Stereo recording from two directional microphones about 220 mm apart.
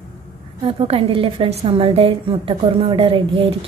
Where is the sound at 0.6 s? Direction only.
25° right (ahead or behind).